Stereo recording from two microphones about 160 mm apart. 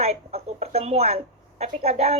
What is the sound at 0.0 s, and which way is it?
Speech, 40° right (ahead or behind).